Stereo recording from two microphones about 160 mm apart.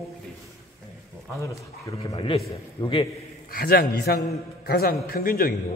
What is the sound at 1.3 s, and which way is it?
Speech, 20° left (ahead or behind).